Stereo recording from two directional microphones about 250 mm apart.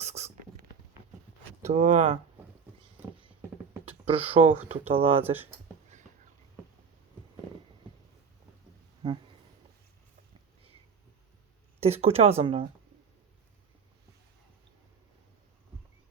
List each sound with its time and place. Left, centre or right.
0.0 s a sound: right
1.6 s speech: right
4.0 s speech: right
11.8 s speech: right